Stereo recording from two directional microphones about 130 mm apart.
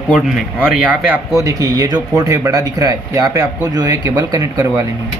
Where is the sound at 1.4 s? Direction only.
30° right (ahead or behind).